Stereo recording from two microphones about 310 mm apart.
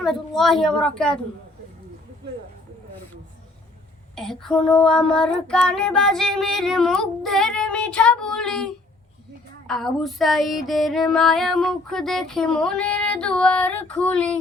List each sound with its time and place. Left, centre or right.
0.0 s child singing: centre
4.1 s child singing: centre